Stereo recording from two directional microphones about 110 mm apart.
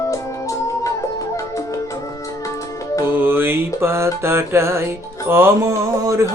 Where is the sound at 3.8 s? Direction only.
25° right (ahead or behind).